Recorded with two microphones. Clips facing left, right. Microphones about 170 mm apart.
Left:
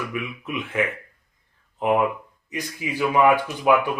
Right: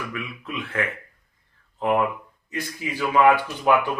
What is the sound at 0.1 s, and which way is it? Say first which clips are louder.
Speech: left 3 dB; 15° left (ahead or behind).